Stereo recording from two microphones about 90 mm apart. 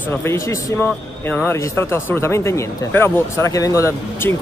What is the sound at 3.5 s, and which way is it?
Speech, 40° left (ahead or behind).